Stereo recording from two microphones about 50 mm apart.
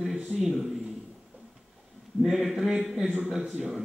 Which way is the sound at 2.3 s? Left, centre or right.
Centre.